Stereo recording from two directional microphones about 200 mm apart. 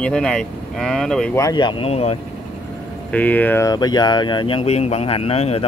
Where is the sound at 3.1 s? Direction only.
10° left (ahead or behind).